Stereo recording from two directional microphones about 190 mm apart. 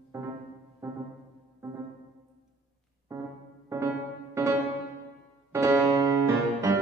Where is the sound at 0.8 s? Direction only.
15° right (ahead or behind).